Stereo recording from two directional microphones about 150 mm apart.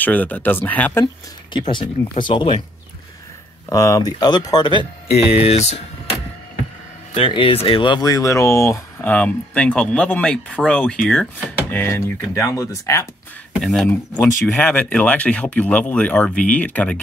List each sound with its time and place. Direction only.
0.0 s speech: 10° left (ahead or behind)
1.0 s speech: 30° left (ahead or behind)
3.6 s speech: 20° left (ahead or behind)
5.1 s speech: 45° left (ahead or behind)
7.2 s speech: 35° left (ahead or behind); by 13.0 s 20° left (ahead or behind)
13.6 s speech: centre (ahead or behind)
13.8 s speech: 20° left (ahead or behind)